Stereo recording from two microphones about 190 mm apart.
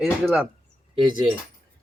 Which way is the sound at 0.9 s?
25° right (ahead or behind).